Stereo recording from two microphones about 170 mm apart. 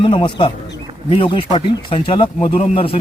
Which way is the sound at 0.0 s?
30° left (ahead or behind).